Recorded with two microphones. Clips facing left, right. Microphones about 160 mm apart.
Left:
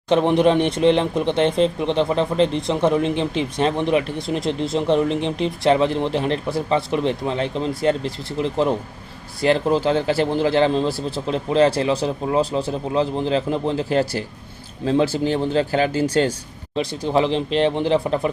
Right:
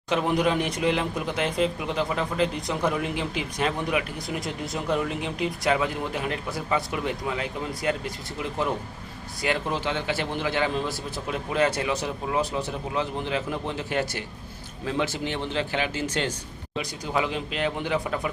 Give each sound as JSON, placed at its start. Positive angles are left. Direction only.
{"t": 0.1, "sound": "a man's voice", "side_deg": 30}